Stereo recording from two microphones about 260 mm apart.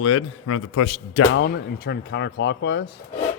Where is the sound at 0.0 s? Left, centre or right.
Left.